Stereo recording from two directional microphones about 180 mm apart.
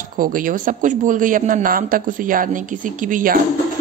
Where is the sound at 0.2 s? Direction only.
50° right (ahead or behind).